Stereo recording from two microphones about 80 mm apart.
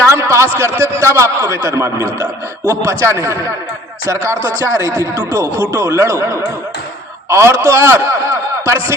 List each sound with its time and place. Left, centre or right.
0.1 s a sound: right
0.6 s a man's voice: right
4.4 s a man's voice: right
7.3 s a man's voice: right